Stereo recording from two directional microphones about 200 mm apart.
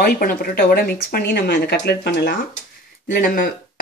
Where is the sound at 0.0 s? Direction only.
45° left (ahead or behind).